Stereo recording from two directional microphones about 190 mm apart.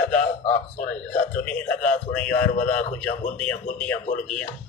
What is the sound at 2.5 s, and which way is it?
Speech, 40° left (ahead or behind).